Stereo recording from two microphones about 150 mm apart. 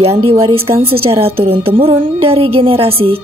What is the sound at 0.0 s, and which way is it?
A woman's voice, 40° right (ahead or behind).